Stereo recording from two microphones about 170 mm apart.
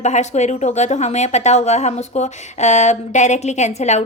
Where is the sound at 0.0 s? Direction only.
45° left (ahead or behind).